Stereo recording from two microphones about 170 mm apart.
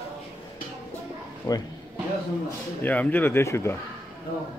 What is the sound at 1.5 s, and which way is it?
Speech, 20° left (ahead or behind).